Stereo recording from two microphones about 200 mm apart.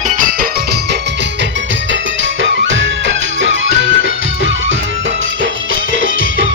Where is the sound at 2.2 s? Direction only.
70° right (ahead or behind).